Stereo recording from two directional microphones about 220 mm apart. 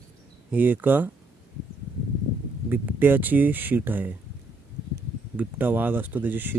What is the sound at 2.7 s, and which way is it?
Speech, 10° right (ahead or behind).